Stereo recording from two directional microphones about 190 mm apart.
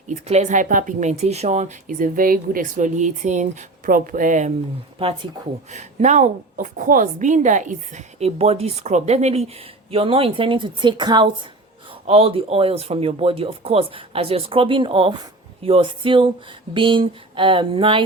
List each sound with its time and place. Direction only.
0.1 s speech: 35° right (ahead or behind)
4.9 s speech: 30° right (ahead or behind)